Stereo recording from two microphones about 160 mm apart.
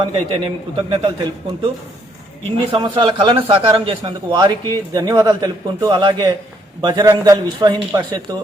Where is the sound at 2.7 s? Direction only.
30° right (ahead or behind).